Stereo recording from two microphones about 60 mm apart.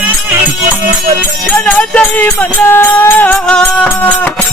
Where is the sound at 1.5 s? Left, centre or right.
Centre.